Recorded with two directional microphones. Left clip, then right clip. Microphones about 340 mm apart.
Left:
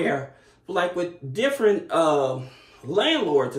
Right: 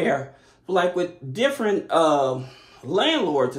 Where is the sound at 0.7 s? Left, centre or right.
Centre.